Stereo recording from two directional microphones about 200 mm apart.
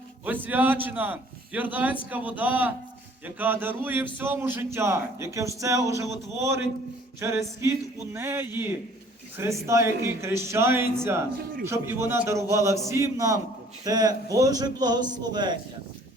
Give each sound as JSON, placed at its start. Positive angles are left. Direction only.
{"t": 0.3, "sound": "a man's voice", "side_deg": -10}
{"t": 7.2, "sound": "a man's voice", "side_deg": -15}